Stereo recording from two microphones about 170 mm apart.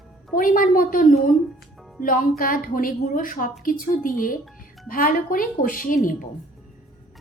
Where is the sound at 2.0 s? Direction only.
55° left (ahead or behind).